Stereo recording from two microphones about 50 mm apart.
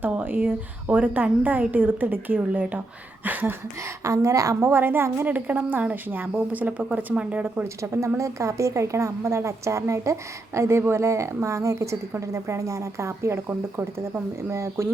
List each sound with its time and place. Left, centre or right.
0.3 s a woman's voice: right
3.2 s a woman's voice: right
3.8 s a woman's voice: right
4.7 s speech: right
5.2 s a woman's voice: right
7.4 s a woman's voice: right
7.8 s a woman's voice: right
13.5 s speech: right
14.5 s a woman's voice: right